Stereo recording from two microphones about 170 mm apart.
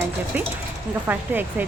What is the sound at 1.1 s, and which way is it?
Speech, 10° right (ahead or behind).